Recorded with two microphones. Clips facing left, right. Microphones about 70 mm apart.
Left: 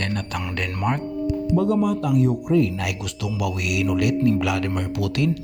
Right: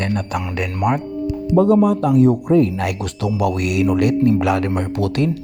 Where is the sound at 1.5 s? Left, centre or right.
Right.